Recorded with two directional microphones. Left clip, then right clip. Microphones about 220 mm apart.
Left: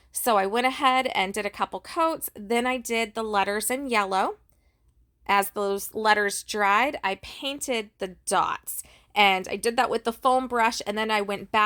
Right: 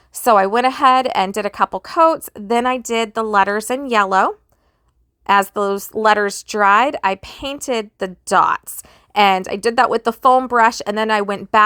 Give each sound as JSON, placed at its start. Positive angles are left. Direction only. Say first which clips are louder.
{"t": 0.1, "sound": "a woman's voice", "louder": "right 10 dB", "side_deg": -25}